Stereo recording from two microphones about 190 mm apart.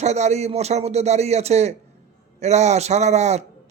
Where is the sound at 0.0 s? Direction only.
35° right (ahead or behind).